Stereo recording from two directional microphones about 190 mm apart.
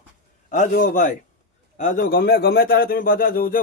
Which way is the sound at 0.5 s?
45° left (ahead or behind).